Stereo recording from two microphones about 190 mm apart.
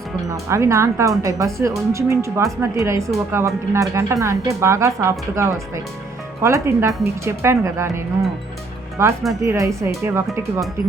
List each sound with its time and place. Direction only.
0.3 s speech: 15° right (ahead or behind)